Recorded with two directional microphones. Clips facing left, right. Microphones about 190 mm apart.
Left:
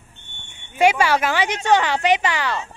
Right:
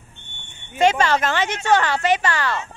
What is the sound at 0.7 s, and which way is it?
A woman's voice, 10° left (ahead or behind).